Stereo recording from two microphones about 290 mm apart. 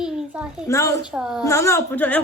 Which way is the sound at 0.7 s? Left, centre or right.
Centre.